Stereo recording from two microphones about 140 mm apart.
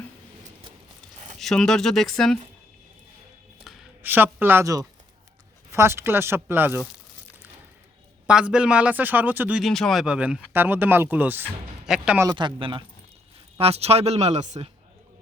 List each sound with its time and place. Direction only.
1.4 s speech: 5° left (ahead or behind)
3.6 s a sound: centre (ahead or behind)
4.0 s speech: 15° right (ahead or behind)
8.3 s speech: 5° right (ahead or behind)
9.6 s speech: centre (ahead or behind)
12.2 s speech: 30° right (ahead or behind); by 14.7 s 55° right (ahead or behind)